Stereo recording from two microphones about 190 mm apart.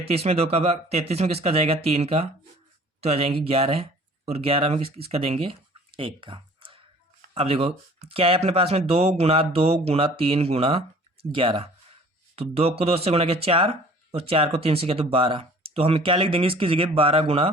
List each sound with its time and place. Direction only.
0.0 s speech: 35° right (ahead or behind)